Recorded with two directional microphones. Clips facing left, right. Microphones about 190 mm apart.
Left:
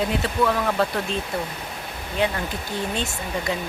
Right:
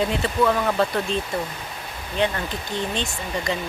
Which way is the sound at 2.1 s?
5° left (ahead or behind).